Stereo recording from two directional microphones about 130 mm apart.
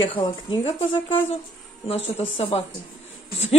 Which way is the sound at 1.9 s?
50° left (ahead or behind).